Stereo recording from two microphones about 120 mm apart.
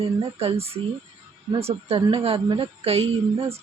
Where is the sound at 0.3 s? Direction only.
55° right (ahead or behind).